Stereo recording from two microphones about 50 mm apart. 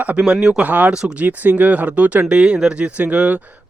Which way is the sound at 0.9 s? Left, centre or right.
Centre.